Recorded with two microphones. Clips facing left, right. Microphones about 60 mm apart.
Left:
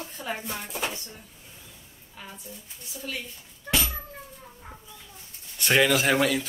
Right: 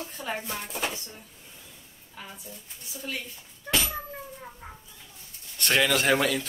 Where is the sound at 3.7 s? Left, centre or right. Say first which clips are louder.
Even; centre.